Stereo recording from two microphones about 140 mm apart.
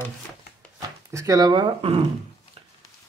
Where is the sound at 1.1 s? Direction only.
25° right (ahead or behind).